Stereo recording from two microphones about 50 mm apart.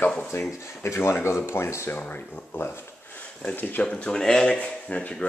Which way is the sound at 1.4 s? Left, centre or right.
Left.